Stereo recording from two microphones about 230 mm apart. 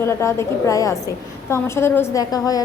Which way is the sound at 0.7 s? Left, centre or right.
Centre.